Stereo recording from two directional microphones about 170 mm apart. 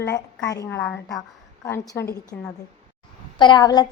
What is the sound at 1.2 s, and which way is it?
Speech, 20° left (ahead or behind).